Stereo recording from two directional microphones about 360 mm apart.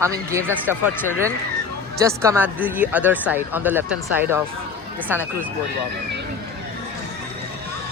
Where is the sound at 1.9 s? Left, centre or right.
Centre.